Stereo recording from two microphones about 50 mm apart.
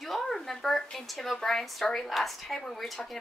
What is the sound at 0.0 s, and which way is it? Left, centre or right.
A woman's voice, centre.